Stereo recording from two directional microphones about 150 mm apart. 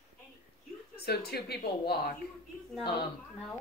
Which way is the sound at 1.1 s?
90° left.